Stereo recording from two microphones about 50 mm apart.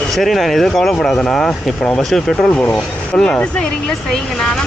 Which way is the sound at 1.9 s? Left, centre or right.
Centre.